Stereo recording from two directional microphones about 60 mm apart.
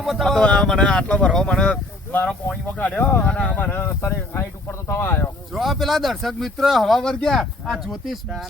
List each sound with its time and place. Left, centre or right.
0.0 s speech: centre
0.3 s speech: centre
2.7 s speech: left
3.2 s speech: centre
3.6 s a sound: left
5.5 s speech: centre